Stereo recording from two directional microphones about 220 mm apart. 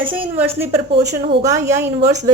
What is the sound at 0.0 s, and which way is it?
Speech, 25° right (ahead or behind).